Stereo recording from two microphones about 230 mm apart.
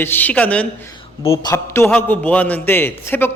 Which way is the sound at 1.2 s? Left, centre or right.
Left.